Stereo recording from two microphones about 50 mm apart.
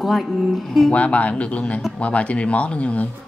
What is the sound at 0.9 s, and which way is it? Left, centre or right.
Speech, left.